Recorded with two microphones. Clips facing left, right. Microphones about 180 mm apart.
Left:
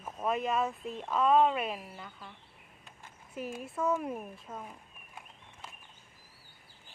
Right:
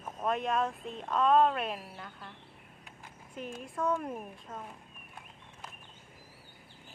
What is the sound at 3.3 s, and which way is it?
Speech, 5° left (ahead or behind).